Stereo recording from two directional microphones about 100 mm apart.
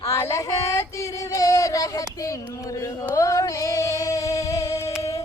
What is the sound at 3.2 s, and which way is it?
Female singing, 35° left (ahead or behind).